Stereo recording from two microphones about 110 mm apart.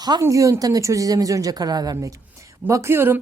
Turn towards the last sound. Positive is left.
turn(degrees=-20)  # may be behind; listen again after turning